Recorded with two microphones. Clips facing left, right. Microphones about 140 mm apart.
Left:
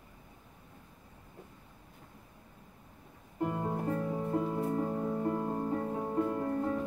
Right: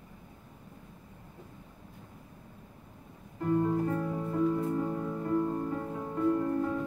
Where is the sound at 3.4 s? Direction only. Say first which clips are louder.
Right 6 dB; 25° left (ahead or behind).